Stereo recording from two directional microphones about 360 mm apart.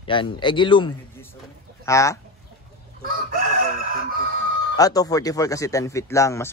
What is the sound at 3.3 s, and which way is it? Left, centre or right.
Chicken, right.